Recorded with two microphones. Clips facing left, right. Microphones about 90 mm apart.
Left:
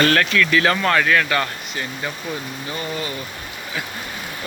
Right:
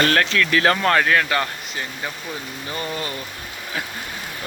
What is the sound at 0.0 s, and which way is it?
Speech, 30° right (ahead or behind).